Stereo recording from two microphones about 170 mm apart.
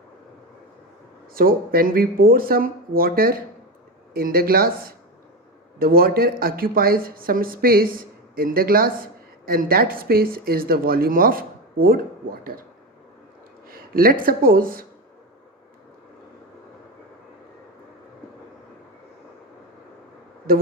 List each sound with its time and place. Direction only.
1.3 s speech: 60° right (ahead or behind)
13.7 s speech: 60° right (ahead or behind)
20.5 s speech: 60° right (ahead or behind)